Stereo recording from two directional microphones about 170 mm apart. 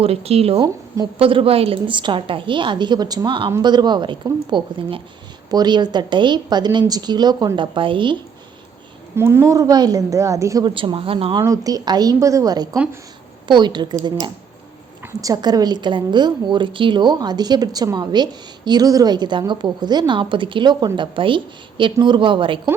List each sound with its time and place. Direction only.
0.0 s a woman's voice: 35° right (ahead or behind)
9.1 s a woman's voice: 15° right (ahead or behind)
12.7 s a woman's voice: 10° right (ahead or behind)
13.5 s a woman's voice: 25° right (ahead or behind)
15.0 s a woman's voice: 20° right (ahead or behind)